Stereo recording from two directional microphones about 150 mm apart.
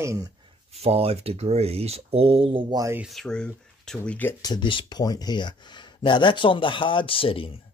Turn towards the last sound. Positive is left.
turn(degrees=35)  # may be behind; listen again after turning